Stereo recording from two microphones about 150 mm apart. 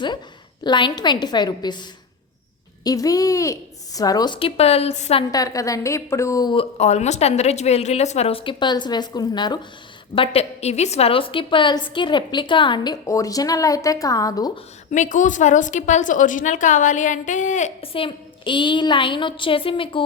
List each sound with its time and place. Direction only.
0.6 s a woman's voice: 30° left (ahead or behind); by 5.2 s 45° left (ahead or behind)
5.3 s a woman's voice: 25° left (ahead or behind)
6.7 s a woman's voice: 45° left (ahead or behind); by 9.6 s 30° left (ahead or behind)
10.2 s a woman's voice: 45° left (ahead or behind); by 14.6 s 25° left (ahead or behind)
14.8 s a woman's voice: 55° left (ahead or behind)
17.9 s a woman's voice: 35° left (ahead or behind)